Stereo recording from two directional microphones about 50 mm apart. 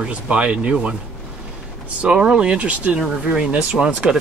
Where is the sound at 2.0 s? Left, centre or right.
Centre.